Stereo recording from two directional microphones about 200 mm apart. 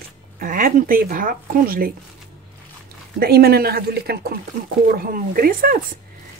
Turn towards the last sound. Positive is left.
turn(degrees=-45)  # may be behind; listen again after turning